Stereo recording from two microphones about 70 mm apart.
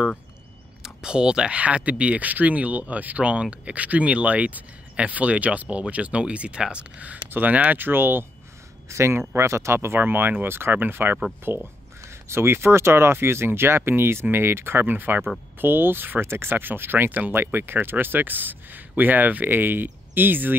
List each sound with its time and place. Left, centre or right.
0.8 s speech: centre; by 20.5 s right